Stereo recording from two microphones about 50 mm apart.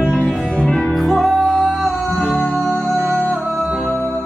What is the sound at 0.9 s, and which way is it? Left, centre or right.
Music, centre.